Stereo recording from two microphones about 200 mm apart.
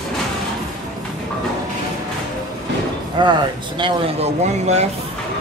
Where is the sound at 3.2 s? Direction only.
20° right (ahead or behind).